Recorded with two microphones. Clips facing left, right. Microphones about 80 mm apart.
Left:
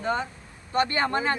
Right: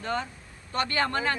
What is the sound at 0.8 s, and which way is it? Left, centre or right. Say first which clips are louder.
Speech: right 2 dB; left.